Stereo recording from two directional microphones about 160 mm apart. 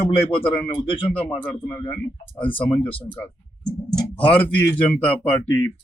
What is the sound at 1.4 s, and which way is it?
Speech, 15° left (ahead or behind).